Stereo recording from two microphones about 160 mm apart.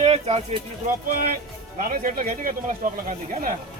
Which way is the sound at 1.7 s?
60° right (ahead or behind).